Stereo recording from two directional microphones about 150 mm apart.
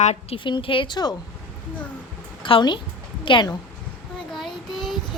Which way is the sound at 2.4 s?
35° left (ahead or behind).